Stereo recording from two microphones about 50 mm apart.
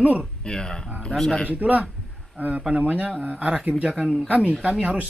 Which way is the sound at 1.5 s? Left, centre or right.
Right.